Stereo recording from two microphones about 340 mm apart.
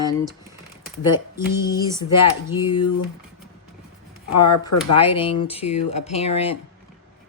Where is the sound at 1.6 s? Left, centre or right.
Centre.